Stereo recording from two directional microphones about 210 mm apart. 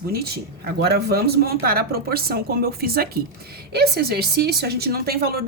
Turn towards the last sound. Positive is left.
turn(degrees=-50)  # may be behind; listen again after turning